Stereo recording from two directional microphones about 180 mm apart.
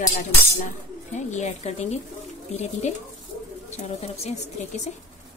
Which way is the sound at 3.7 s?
35° left (ahead or behind).